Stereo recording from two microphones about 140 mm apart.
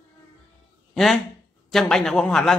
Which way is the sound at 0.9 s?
Centre (ahead or behind).